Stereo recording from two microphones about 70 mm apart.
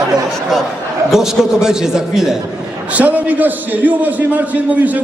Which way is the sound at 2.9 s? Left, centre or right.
Right.